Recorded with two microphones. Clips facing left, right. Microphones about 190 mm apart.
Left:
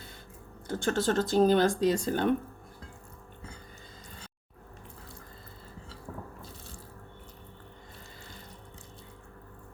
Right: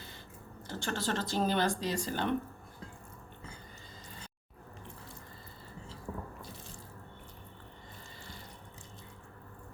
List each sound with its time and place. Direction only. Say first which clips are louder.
0.7 s speech: left 7 dB; 45° left (ahead or behind)